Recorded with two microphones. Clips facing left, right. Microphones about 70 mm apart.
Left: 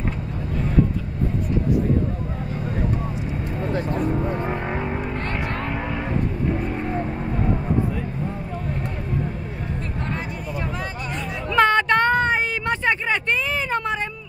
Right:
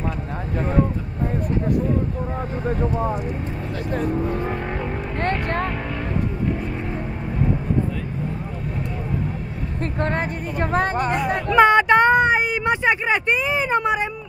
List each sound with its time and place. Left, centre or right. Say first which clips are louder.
5.2 s speech: right 4 dB; right
10.0 s speech: right 6 dB; right
11.5 s a sound: right 3 dB; centre